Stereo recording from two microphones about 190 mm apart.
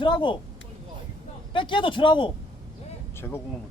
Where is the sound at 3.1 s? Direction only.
10° left (ahead or behind).